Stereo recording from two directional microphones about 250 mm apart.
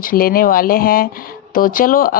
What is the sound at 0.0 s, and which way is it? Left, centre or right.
Speech, left.